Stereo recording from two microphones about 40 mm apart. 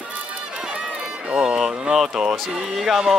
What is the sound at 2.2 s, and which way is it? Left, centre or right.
Speech, centre.